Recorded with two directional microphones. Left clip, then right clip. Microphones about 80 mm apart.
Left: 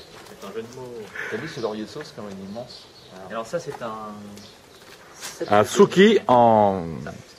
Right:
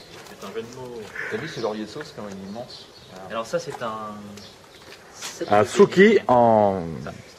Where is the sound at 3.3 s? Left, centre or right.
Centre.